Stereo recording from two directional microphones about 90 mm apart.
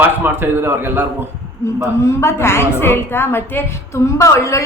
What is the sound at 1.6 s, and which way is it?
A woman's voice, 35° left (ahead or behind).